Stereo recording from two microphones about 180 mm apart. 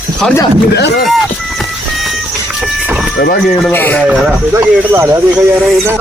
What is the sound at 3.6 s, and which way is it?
Speech, 10° left (ahead or behind).